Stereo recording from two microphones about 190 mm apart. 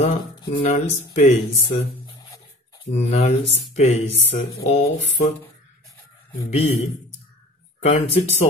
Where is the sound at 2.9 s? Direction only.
35° left (ahead or behind).